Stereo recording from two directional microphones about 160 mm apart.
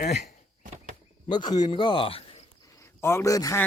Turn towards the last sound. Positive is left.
turn(degrees=20)  # may be behind; listen again after turning